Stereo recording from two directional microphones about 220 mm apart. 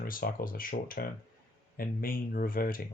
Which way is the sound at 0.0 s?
40° left (ahead or behind).